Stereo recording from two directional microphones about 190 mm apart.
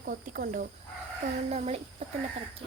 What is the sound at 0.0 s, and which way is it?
Speech, 50° right (ahead or behind).